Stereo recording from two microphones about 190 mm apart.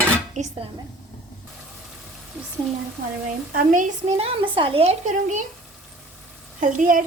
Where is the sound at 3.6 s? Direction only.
45° right (ahead or behind).